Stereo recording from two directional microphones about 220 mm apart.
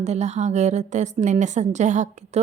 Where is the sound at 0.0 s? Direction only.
30° right (ahead or behind).